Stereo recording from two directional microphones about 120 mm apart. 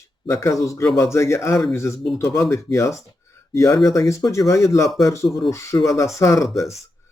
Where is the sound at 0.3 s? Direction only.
25° left (ahead or behind).